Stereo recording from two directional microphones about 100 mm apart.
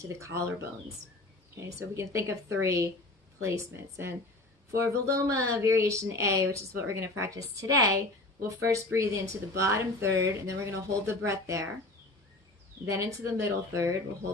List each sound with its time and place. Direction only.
0.1 s speech: 30° right (ahead or behind)
12.8 s speech: 30° right (ahead or behind)